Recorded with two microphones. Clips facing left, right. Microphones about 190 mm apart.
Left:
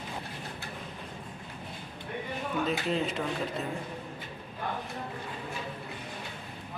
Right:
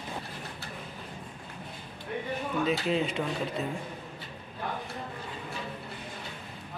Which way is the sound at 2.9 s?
Centre (ahead or behind).